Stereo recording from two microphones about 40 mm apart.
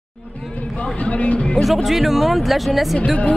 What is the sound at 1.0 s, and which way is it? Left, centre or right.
Speech, left.